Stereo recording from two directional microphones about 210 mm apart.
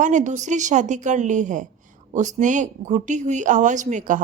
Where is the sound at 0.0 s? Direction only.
35° right (ahead or behind).